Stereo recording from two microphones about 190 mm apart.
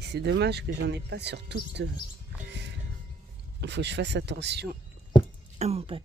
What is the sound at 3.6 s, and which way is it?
Speech, 65° right (ahead or behind).